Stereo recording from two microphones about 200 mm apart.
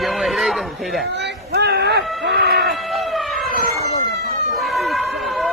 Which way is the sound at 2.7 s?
Centre (ahead or behind).